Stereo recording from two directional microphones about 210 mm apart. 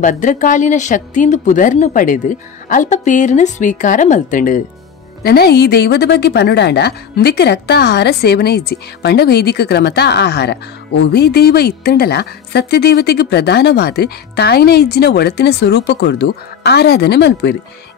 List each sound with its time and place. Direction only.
0.0 s a woman's voice: 35° left (ahead or behind); by 17.6 s 55° left (ahead or behind)